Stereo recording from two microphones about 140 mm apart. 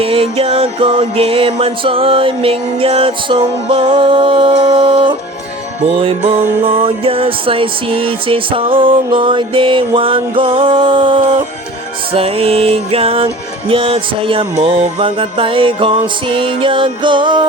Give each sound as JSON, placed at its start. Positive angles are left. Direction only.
{"t": 0.0, "sound": "music", "side_deg": -45}